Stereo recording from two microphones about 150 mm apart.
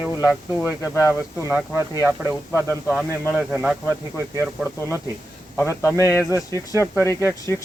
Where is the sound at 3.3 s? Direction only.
5° right (ahead or behind).